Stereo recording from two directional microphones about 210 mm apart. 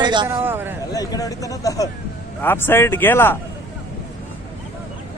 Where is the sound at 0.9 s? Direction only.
15° left (ahead or behind).